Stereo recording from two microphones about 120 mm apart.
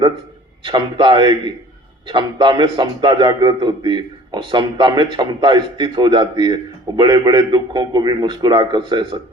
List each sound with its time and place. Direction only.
0.6 s a man's voice: 40° right (ahead or behind)